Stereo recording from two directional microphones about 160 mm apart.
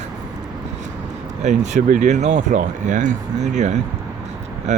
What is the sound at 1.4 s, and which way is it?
Speech, 45° right (ahead or behind).